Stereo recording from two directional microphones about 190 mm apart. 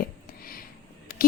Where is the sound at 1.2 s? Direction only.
50° left (ahead or behind).